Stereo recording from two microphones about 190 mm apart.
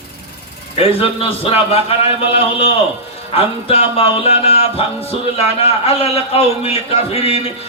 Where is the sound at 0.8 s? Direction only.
30° left (ahead or behind).